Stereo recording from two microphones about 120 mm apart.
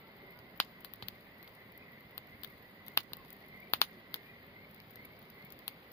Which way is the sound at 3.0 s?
20° left (ahead or behind).